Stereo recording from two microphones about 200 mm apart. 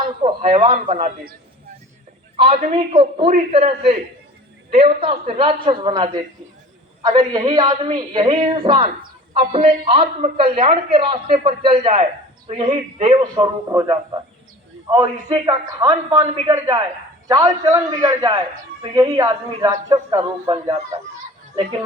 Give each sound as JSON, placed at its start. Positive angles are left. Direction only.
{"t": 0.0, "sound": "a man's voice", "side_deg": -25}
{"t": 0.9, "sound": "a woman's voice", "side_deg": -40}
{"t": 2.3, "sound": "a man's voice", "side_deg": -30}
{"t": 21.5, "sound": "speech", "side_deg": -30}